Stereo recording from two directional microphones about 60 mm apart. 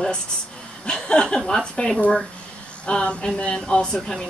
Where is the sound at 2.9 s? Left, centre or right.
Centre.